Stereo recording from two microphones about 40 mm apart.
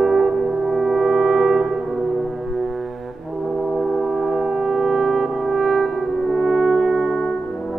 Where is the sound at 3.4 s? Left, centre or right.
Centre.